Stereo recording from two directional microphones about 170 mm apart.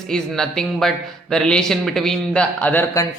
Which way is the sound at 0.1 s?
5° left (ahead or behind).